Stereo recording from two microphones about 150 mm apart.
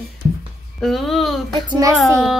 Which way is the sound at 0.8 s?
Centre (ahead or behind).